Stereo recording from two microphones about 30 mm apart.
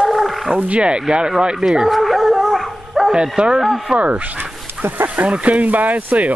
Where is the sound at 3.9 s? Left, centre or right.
Right.